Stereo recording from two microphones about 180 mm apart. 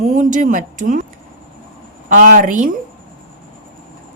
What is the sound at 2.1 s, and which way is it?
Speech, 50° right (ahead or behind).